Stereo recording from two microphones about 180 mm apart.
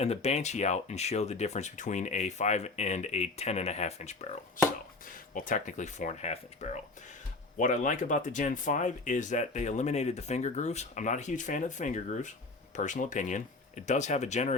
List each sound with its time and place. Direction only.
0.0 s speech: 35° left (ahead or behind)